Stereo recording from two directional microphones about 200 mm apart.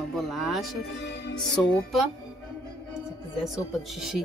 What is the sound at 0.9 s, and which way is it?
Music, 60° left (ahead or behind).